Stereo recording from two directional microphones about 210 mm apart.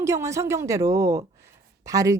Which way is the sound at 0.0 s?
15° right (ahead or behind).